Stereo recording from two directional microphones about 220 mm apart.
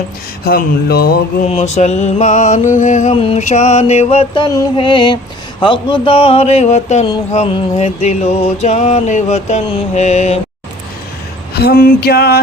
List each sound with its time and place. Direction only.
0.4 s mantra: 45° left (ahead or behind)
1.5 s music: 30° left (ahead or behind)
4.5 s a sound: 20° left (ahead or behind)
11.6 s mantra: 45° left (ahead or behind)